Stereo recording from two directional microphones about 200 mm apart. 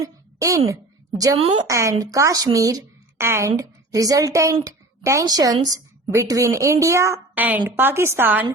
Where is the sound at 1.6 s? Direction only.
15° right (ahead or behind).